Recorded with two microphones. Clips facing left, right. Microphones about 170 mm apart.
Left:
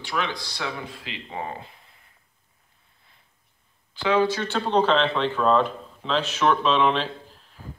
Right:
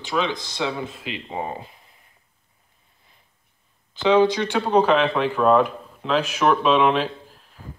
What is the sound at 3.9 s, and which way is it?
Speech, 20° right (ahead or behind).